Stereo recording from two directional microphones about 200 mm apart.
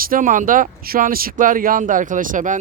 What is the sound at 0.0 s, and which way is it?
Speech, 45° right (ahead or behind).